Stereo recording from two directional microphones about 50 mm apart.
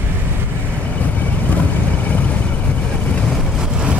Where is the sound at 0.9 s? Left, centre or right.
Left.